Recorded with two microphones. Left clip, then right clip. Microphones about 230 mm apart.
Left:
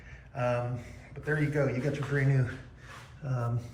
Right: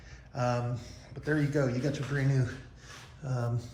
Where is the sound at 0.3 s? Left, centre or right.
Centre.